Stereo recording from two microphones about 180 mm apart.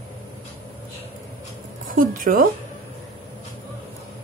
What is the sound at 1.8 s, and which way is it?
Speech, 50° right (ahead or behind).